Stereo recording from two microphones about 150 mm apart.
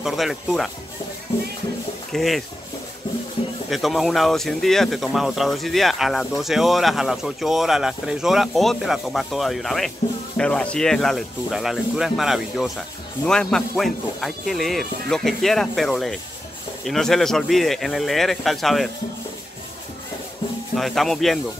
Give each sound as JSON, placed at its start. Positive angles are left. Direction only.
{"t": 0.0, "sound": "speech", "side_deg": 0}
{"t": 2.1, "sound": "speech", "side_deg": 0}
{"t": 3.4, "sound": "music", "side_deg": 40}
{"t": 3.7, "sound": "speech", "side_deg": 0}
{"t": 20.7, "sound": "speech", "side_deg": 0}